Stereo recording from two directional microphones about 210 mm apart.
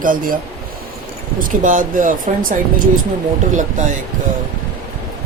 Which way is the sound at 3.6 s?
35° right (ahead or behind).